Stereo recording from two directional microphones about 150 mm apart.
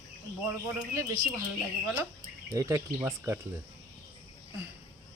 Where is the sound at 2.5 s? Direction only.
20° right (ahead or behind).